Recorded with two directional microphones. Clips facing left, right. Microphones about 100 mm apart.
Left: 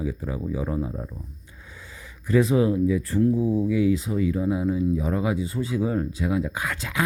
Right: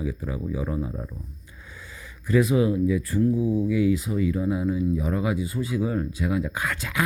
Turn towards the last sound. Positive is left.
turn(degrees=20)  # may be behind; listen again after turning